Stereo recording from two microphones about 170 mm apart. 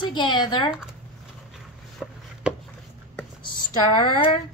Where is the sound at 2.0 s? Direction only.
5° right (ahead or behind).